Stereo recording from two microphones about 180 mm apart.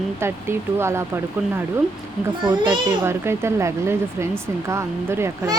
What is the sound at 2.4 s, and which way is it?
Speech, 25° right (ahead or behind).